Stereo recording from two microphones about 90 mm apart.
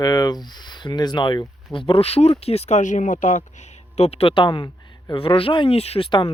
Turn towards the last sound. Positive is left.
turn(degrees=75)  # may be behind; listen again after turning